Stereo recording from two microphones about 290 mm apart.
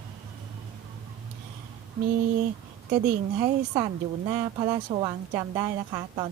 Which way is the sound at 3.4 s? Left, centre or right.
Centre.